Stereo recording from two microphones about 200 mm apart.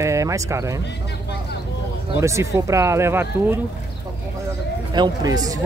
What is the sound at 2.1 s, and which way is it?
Speech, 15° right (ahead or behind).